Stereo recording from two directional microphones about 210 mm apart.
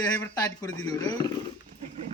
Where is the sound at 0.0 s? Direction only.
15° left (ahead or behind).